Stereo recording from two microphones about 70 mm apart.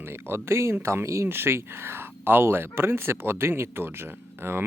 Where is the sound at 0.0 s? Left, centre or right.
Right.